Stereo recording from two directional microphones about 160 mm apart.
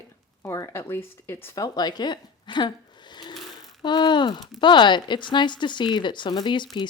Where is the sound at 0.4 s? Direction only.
15° left (ahead or behind).